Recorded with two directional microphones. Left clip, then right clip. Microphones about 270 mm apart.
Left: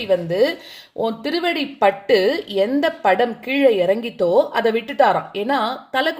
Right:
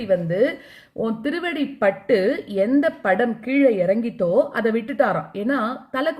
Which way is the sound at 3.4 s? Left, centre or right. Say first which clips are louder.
Left 2 dB; left.